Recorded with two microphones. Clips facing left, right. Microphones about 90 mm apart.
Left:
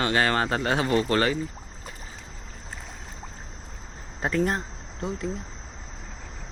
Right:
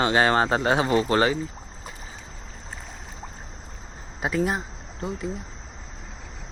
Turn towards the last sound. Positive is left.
turn(degrees=0)  # may be behind; listen again after turning